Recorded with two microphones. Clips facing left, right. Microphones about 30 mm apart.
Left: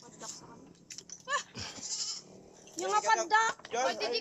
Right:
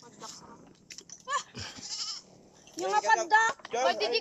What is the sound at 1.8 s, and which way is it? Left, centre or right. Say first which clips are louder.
Goat: right 1 dB; right.